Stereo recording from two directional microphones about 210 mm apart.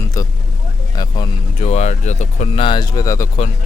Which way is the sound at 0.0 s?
15° left (ahead or behind).